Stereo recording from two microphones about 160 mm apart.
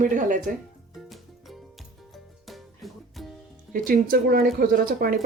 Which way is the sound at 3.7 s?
60° right (ahead or behind).